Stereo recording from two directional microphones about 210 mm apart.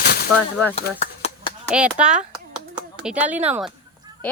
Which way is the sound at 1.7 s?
5° right (ahead or behind).